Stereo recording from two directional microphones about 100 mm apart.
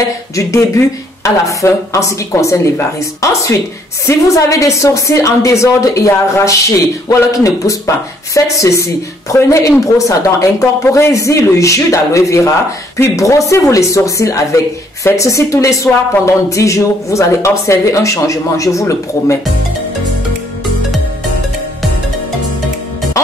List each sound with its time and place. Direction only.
0.4 s speech: 30° left (ahead or behind)